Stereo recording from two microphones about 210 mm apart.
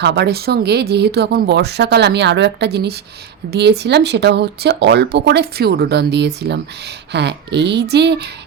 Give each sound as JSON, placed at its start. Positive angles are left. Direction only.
{"t": 0.0, "sound": "speech", "side_deg": -50}